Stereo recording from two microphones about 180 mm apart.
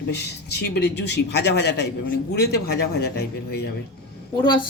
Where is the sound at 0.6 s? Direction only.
70° left (ahead or behind).